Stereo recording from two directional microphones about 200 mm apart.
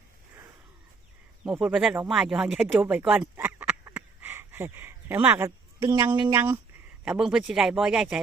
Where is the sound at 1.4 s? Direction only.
5° right (ahead or behind).